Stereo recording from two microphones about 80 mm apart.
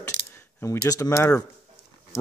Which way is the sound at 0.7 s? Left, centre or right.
Left.